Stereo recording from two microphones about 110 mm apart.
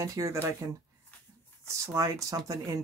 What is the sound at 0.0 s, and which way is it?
Speech, 30° right (ahead or behind).